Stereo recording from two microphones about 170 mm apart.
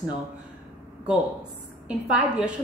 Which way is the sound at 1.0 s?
5° right (ahead or behind).